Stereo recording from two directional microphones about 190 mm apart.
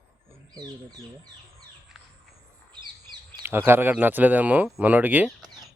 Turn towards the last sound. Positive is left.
turn(degrees=-10)  # may be behind; listen again after turning